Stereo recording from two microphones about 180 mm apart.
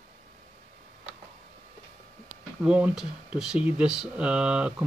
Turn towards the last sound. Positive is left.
turn(degrees=-5)  # may be behind; listen again after turning